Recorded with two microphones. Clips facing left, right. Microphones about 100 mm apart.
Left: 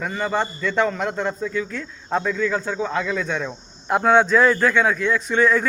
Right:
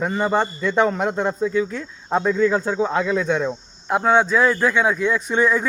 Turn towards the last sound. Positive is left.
turn(degrees=-15)  # may be behind; listen again after turning